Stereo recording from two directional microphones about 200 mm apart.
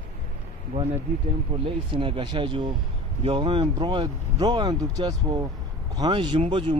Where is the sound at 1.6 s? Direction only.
25° right (ahead or behind).